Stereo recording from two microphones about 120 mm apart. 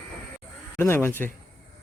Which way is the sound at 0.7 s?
20° left (ahead or behind).